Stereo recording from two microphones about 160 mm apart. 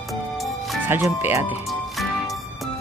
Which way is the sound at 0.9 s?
15° right (ahead or behind).